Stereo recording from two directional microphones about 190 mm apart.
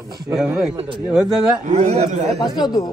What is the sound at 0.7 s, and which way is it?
Speech, 25° right (ahead or behind).